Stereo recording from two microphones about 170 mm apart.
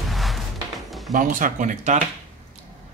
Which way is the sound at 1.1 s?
50° right (ahead or behind).